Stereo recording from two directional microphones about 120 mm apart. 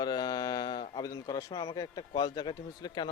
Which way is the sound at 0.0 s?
35° left (ahead or behind).